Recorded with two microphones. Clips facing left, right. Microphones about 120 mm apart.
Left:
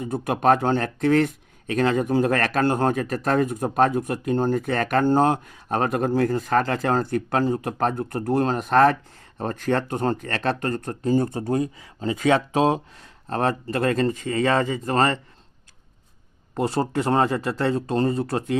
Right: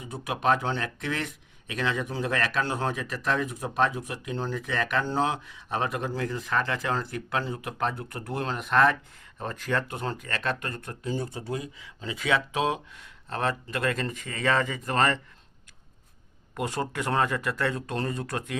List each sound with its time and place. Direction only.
0.0 s speech: 50° left (ahead or behind); by 15.2 s 35° left (ahead or behind)
16.6 s speech: 35° left (ahead or behind)